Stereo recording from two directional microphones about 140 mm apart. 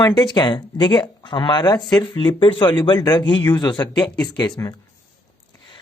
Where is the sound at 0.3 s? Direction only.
35° left (ahead or behind).